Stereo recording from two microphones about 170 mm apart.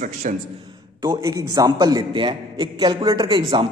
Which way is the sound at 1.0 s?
25° right (ahead or behind).